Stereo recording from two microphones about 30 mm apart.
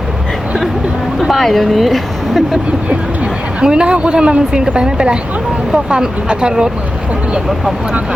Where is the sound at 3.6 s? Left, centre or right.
Right.